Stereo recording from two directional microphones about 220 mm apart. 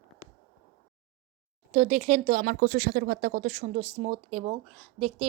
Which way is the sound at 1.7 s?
30° right (ahead or behind).